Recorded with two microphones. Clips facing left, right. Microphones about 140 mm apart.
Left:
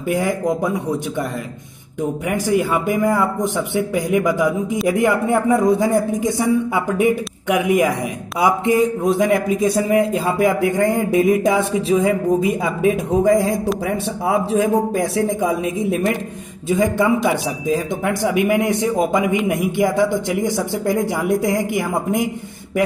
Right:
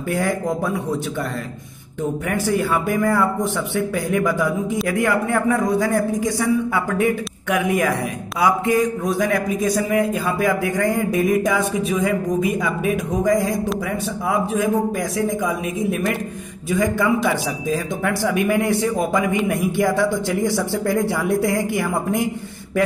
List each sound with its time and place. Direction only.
0.1 s speech: 15° left (ahead or behind)
2.0 s speech: 15° left (ahead or behind)